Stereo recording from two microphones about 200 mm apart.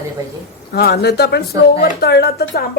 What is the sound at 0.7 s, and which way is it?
Speech, 50° left (ahead or behind).